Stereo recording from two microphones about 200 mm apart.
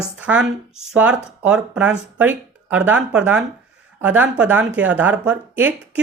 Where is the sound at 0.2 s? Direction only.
5° right (ahead or behind).